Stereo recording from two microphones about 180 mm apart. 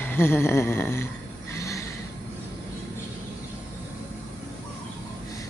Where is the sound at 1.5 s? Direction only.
15° left (ahead or behind).